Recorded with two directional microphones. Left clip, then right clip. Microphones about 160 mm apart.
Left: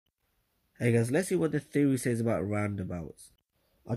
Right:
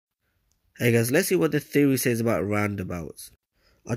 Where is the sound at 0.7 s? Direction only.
25° right (ahead or behind).